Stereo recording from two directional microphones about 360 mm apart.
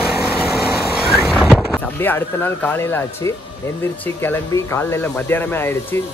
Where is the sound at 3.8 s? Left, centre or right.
Centre.